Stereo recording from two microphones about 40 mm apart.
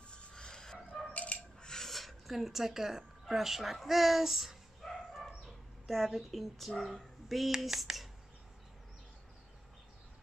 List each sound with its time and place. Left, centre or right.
0.1 s dog: left
1.1 s coin: left
1.6 s a sound: centre
1.9 s speech: centre
4.8 s bow-wow: centre
6.8 s speech: centre